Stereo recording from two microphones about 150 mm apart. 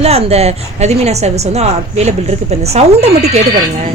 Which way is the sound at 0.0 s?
45° right (ahead or behind).